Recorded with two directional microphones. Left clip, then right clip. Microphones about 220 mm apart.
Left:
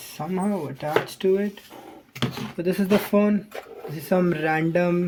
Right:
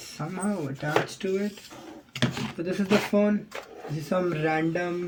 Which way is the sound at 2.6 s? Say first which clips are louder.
Left 3 dB; 45° left (ahead or behind).